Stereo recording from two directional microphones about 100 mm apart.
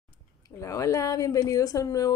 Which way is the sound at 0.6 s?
35° left (ahead or behind).